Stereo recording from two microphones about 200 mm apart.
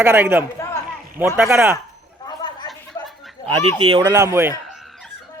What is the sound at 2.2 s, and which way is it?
Chatter, 20° left (ahead or behind).